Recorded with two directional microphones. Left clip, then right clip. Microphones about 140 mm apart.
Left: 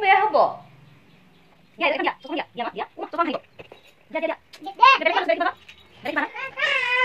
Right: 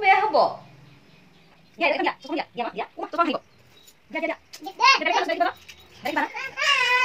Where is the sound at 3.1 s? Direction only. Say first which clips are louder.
Right 1 dB; 15° right (ahead or behind).